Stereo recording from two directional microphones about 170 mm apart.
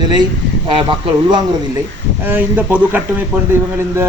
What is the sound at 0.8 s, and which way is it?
Speech, 30° right (ahead or behind).